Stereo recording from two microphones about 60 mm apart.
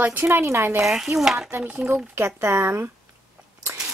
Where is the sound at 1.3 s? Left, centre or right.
Right.